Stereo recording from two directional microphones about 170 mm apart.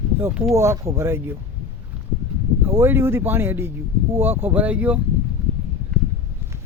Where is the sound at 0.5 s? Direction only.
15° right (ahead or behind).